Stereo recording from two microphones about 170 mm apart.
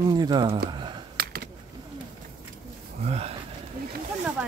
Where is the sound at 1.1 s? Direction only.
70° right (ahead or behind).